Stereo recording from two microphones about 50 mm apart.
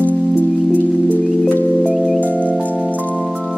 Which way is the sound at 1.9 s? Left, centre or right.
Centre.